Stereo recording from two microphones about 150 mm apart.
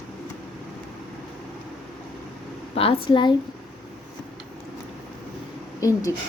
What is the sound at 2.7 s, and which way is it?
Speech, 40° left (ahead or behind).